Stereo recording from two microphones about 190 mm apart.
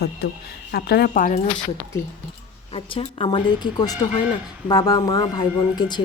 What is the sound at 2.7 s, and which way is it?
Speech, 30° left (ahead or behind).